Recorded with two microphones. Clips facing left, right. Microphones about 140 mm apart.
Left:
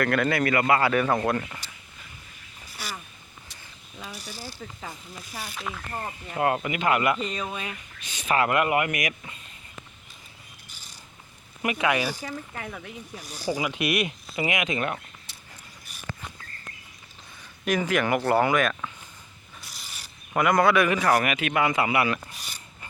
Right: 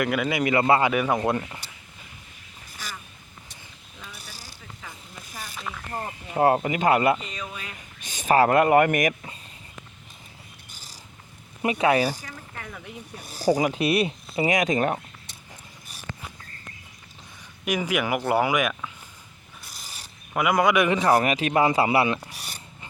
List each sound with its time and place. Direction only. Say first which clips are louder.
0.0 s a man's voice: left 1 dB; 10° right (ahead or behind)
5.3 s speech: left 2 dB; 45° right (ahead or behind)
5.5 s speech: even; 5° left (ahead or behind)
5.9 s speech: right 2 dB; 30° right (ahead or behind)
8.0 s speech: right 5 dB; 45° right (ahead or behind)
11.6 s speech: right 4 dB; 30° right (ahead or behind)
13.4 s speech: right 6 dB; 40° right (ahead or behind)
17.7 s a man's voice: left 1 dB; 10° right (ahead or behind)
19.8 s rub: right 1 dB; 35° right (ahead or behind)
20.3 s a man's voice: even; 10° right (ahead or behind); by 22.2 s 25° right (ahead or behind)